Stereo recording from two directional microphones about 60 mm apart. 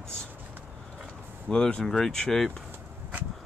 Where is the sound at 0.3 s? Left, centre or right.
Right.